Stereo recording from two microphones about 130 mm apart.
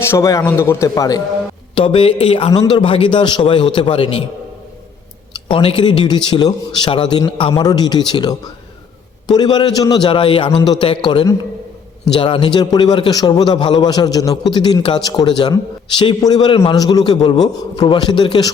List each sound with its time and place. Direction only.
0.0 s a man's voice: 20° left (ahead or behind)
1.7 s speech: 40° left (ahead or behind)
2.5 s a man's voice: 35° left (ahead or behind)
5.5 s a man's voice: 40° left (ahead or behind)